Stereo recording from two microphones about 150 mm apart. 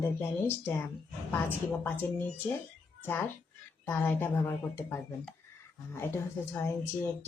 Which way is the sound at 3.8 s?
15° left (ahead or behind).